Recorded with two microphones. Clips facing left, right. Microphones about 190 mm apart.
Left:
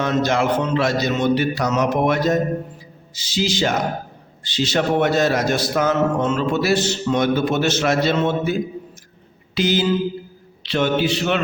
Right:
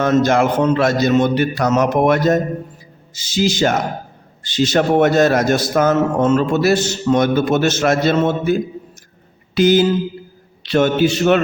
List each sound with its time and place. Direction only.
0.0 s a man's voice: 50° right (ahead or behind)
9.6 s a man's voice: 50° right (ahead or behind)